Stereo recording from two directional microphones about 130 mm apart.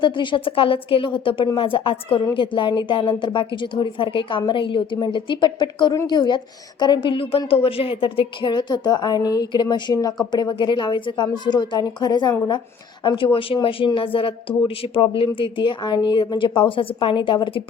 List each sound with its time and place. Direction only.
0.0 s a woman's voice: 35° left (ahead or behind)